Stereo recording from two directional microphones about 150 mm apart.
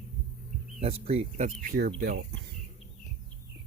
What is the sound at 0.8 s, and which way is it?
Speech, 45° right (ahead or behind).